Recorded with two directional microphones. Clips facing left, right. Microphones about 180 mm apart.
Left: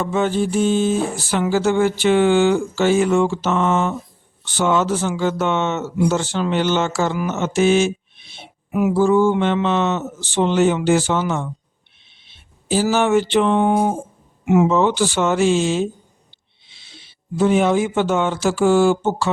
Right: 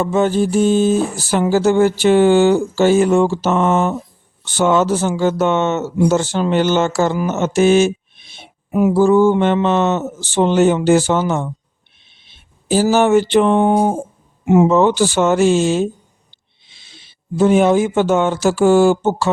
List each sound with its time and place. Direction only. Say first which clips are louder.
0.0 s a sound: right 4 dB; 40° right (ahead or behind)
4.5 s speech: right 4 dB; 45° right (ahead or behind)
14.7 s speech: right 4 dB; 45° right (ahead or behind)